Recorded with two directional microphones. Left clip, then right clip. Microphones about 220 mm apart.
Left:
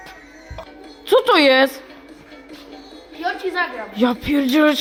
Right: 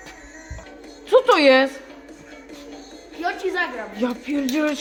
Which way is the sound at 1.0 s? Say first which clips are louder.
Left 1 dB; 50° left (ahead or behind).